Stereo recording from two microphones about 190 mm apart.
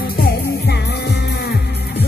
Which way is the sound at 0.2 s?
55° left (ahead or behind).